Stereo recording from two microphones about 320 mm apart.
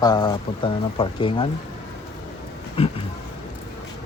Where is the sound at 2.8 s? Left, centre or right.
Centre.